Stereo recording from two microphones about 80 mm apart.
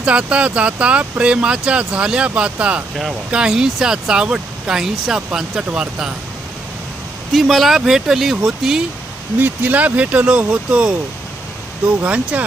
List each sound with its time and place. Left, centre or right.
0.0 s speech: centre
7.3 s speech: centre
9.4 s speech: right
12.0 s speech: centre